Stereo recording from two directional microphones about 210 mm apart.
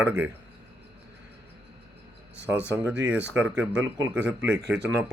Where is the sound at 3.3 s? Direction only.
5° right (ahead or behind).